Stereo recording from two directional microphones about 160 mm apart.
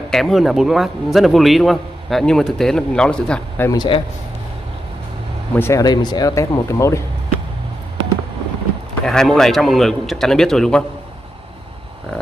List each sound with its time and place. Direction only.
0.1 s a man's voice: centre (ahead or behind)
3.7 s speech: 30° left (ahead or behind)
5.6 s speech: 20° left (ahead or behind)
9.0 s a man's voice: 5° left (ahead or behind)